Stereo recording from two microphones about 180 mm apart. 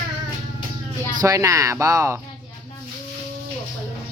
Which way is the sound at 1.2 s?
15° right (ahead or behind).